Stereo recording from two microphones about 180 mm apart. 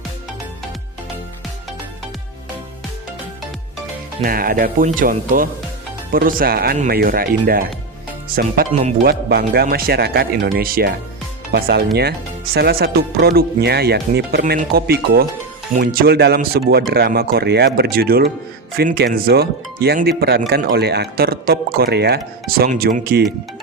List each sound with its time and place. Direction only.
4.2 s speech: 55° right (ahead or behind)